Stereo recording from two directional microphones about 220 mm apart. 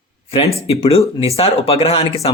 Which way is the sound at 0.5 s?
25° left (ahead or behind).